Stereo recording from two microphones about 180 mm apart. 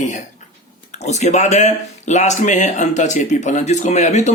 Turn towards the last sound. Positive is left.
turn(degrees=40)  # may be behind; listen again after turning